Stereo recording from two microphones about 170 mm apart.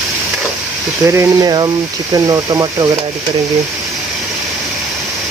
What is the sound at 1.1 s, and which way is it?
Speech, 20° right (ahead or behind).